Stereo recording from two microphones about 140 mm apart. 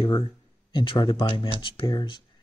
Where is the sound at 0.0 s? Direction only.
35° left (ahead or behind).